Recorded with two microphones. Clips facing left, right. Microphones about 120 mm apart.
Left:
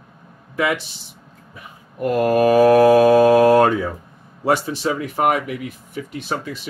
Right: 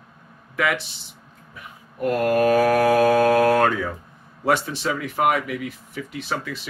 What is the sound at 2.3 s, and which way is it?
Mantra, 25° left (ahead or behind).